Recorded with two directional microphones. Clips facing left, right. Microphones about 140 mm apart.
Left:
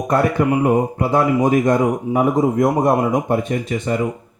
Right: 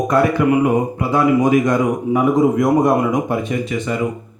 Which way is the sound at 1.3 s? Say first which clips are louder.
Right 1 dB; 35° left (ahead or behind).